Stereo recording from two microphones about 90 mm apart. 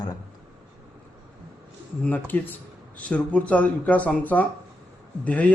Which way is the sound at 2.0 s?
20° left (ahead or behind).